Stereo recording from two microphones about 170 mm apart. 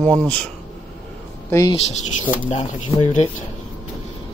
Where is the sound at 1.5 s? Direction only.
20° left (ahead or behind).